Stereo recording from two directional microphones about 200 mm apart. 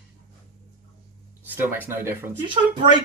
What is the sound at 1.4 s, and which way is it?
Speech, 10° right (ahead or behind).